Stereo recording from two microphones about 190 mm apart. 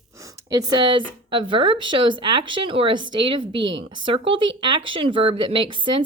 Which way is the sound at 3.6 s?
75° right (ahead or behind).